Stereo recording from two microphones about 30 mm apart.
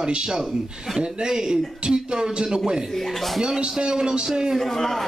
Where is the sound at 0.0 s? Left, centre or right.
Right.